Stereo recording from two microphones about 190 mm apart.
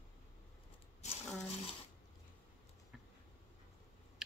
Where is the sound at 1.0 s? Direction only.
35° left (ahead or behind).